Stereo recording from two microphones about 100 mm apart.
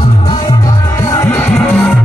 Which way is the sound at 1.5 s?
10° left (ahead or behind).